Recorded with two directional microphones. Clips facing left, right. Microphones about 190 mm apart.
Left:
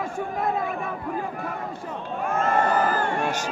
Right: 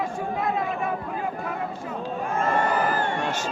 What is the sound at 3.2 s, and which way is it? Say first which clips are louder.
Crowd: left 1 dB; 15° left (ahead or behind).